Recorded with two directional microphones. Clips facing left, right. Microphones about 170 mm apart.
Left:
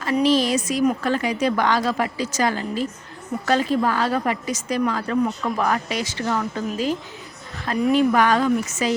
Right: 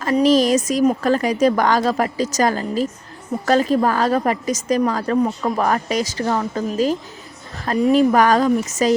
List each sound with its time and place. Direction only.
0.0 s a woman's voice: 40° right (ahead or behind)